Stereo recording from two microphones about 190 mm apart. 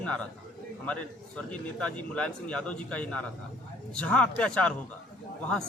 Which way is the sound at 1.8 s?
5° left (ahead or behind).